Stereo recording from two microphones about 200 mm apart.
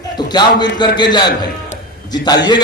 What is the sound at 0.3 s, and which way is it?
Speech, 20° left (ahead or behind).